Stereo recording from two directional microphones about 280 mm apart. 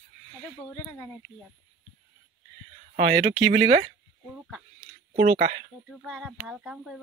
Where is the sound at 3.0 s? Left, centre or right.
Right.